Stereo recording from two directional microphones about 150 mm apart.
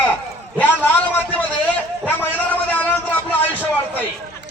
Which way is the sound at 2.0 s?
10° left (ahead or behind).